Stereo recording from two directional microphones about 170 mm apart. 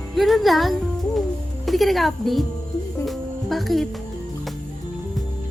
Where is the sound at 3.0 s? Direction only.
Centre (ahead or behind).